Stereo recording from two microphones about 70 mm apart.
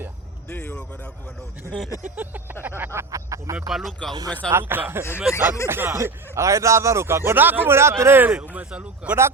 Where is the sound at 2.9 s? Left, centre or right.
Right.